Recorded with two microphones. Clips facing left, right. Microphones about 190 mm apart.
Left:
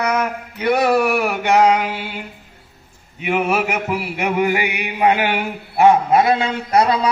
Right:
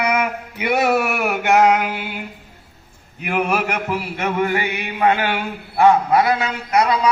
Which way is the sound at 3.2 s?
Centre (ahead or behind).